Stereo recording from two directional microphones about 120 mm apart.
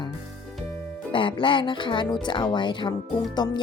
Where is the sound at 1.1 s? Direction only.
45° left (ahead or behind).